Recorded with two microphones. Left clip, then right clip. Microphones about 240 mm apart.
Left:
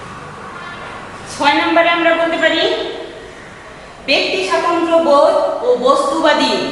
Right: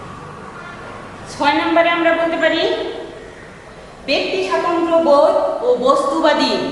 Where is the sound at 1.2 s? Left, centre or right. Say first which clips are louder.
Left 3 dB; centre.